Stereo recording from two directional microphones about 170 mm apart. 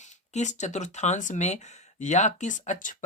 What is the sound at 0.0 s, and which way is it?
Speech, 45° left (ahead or behind).